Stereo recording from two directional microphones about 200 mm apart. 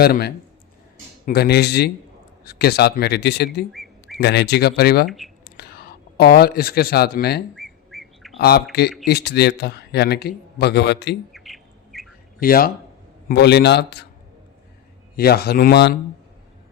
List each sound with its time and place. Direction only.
0.0 s a man's voice: 50° left (ahead or behind)
3.7 s a sound: centre (ahead or behind)
4.2 s a man's voice: 55° left (ahead or behind)
5.0 s speech: centre (ahead or behind)
5.5 s speech: 50° left (ahead or behind)
7.5 s bird: centre (ahead or behind)
8.4 s a man's voice: 50° left (ahead or behind)
11.3 s bird: centre (ahead or behind)
12.4 s a man's voice: 45° left (ahead or behind)
15.1 s a man's voice: 50° left (ahead or behind)